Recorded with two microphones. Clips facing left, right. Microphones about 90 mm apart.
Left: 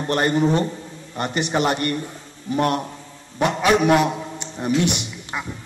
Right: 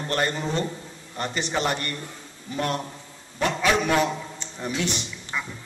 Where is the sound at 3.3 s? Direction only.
15° left (ahead or behind).